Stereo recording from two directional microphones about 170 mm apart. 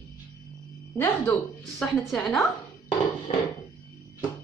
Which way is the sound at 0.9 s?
10° left (ahead or behind).